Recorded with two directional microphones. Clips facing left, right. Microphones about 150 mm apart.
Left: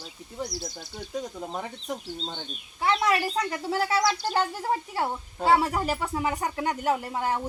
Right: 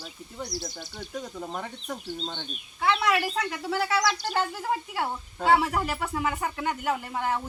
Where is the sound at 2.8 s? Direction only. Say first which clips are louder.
Even; 35° left (ahead or behind).